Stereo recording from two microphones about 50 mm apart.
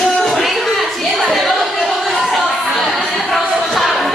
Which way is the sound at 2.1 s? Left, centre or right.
Centre.